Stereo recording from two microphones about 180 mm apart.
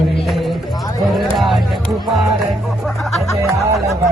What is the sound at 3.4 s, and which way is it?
Music, 15° right (ahead or behind).